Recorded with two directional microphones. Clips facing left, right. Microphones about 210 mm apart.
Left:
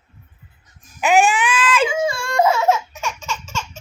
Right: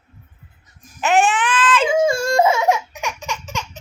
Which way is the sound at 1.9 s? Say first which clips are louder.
Right 5 dB; 45° right (ahead or behind).